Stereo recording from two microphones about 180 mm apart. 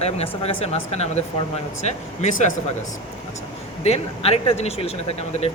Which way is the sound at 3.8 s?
35° left (ahead or behind).